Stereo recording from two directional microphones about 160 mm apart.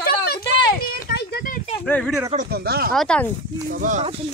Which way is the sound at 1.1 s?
90° left.